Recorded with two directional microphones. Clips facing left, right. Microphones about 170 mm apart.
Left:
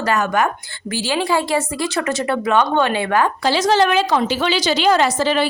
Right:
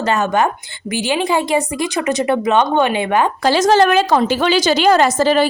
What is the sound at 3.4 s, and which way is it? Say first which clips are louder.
A woman's voice: right 5 dB; 45° right (ahead or behind).